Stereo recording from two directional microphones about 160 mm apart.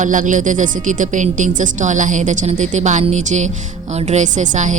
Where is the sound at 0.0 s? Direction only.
55° right (ahead or behind).